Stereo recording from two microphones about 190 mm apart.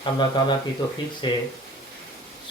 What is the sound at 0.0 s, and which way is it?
Speech, 25° left (ahead or behind).